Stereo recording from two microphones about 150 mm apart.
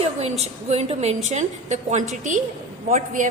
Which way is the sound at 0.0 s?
45° right (ahead or behind).